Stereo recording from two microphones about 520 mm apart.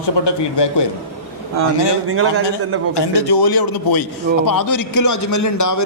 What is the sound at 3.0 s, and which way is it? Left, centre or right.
A man's voice, left.